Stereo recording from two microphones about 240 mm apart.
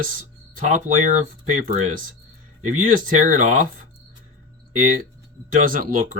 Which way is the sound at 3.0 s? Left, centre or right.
Right.